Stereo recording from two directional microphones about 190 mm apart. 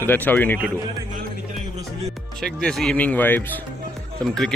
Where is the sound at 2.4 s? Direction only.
Centre (ahead or behind).